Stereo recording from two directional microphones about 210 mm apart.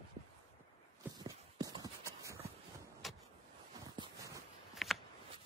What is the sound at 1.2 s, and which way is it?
Clip-clop, 20° right (ahead or behind).